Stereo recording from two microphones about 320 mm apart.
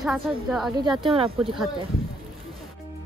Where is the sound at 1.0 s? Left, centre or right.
Centre.